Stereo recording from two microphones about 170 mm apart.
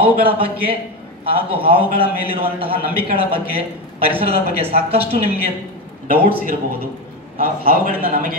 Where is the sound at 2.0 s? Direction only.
35° right (ahead or behind).